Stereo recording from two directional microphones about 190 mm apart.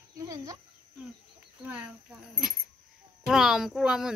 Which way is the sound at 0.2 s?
15° right (ahead or behind).